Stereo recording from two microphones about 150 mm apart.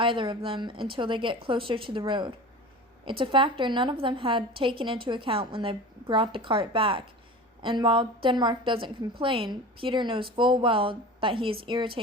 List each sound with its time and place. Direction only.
0.0 s a woman's voice: 35° right (ahead or behind)